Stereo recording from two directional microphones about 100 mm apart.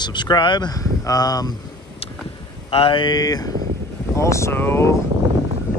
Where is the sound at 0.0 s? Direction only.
50° left (ahead or behind).